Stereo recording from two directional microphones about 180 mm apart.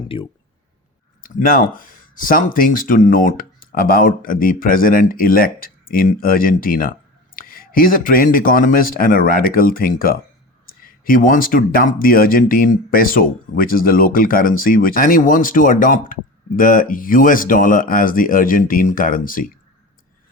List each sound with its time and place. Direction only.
0.1 s speech: 30° left (ahead or behind)
1.2 s speech: 50° left (ahead or behind)